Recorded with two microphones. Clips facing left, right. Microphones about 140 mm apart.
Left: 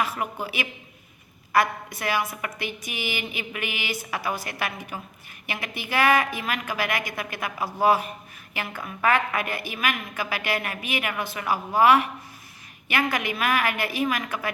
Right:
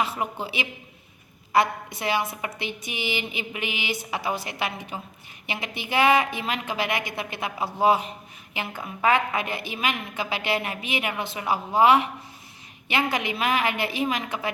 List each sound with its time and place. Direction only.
0.0 s a woman's voice: 25° right (ahead or behind)